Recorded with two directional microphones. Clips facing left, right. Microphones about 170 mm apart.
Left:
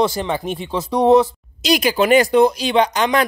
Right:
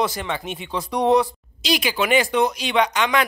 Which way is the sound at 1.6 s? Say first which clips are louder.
Left 6 dB; 45° left (ahead or behind).